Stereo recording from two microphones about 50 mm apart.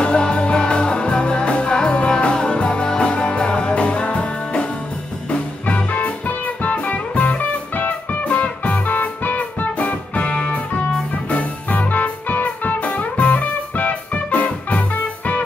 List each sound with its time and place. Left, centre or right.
0.0 s music: centre